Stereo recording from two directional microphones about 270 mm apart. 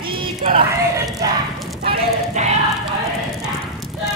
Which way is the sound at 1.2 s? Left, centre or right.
Centre.